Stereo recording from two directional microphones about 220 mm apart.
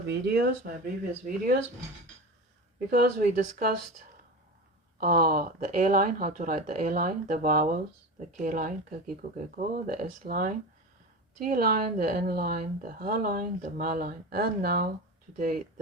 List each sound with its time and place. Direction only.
0.1 s speech: 45° right (ahead or behind)
2.9 s speech: 45° right (ahead or behind)
4.9 s a woman's voice: 40° right (ahead or behind)